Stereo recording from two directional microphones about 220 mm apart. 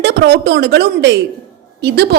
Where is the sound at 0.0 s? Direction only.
50° right (ahead or behind).